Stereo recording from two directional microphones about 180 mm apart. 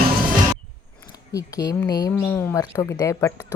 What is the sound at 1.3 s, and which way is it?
Speech, 20° left (ahead or behind).